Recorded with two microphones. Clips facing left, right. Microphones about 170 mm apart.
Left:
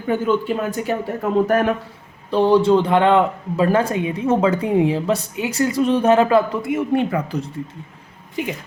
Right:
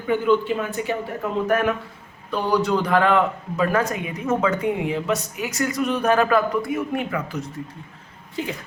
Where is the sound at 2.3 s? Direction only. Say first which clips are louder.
Left 7 dB; 25° left (ahead or behind).